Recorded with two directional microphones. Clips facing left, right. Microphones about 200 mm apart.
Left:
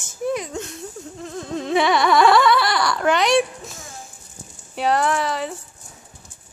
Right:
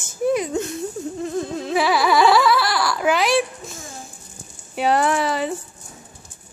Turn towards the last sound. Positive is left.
turn(degrees=-5)  # may be behind; listen again after turning